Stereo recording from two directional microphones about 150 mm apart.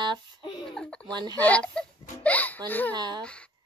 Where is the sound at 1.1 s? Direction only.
30° right (ahead or behind).